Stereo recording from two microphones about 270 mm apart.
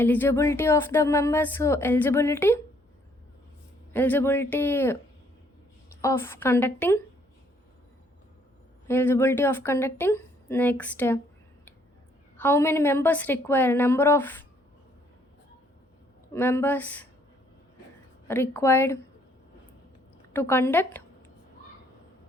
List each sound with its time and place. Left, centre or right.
0.0 s speech: centre
3.9 s speech: centre
6.0 s speech: centre
8.9 s speech: centre
12.4 s speech: centre
16.3 s speech: centre
18.3 s speech: centre
20.3 s speech: centre